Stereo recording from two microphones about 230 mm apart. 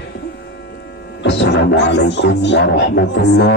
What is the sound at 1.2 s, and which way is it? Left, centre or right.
Music, left.